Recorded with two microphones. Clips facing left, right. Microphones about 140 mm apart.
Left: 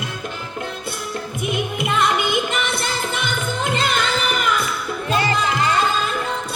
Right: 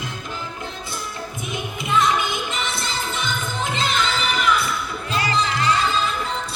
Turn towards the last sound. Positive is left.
turn(degrees=50)  # may be behind; listen again after turning